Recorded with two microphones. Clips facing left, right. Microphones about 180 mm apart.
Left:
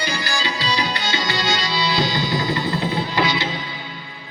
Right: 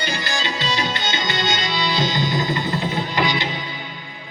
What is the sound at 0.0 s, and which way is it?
Tabla, 20° right (ahead or behind).